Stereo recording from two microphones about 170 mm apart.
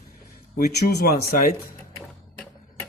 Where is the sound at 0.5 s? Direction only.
70° left (ahead or behind).